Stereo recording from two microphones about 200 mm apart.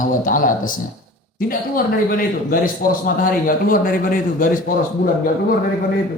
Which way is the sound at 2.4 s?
45° left (ahead or behind).